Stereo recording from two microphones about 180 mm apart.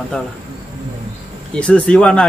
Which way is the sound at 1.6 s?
5° left (ahead or behind).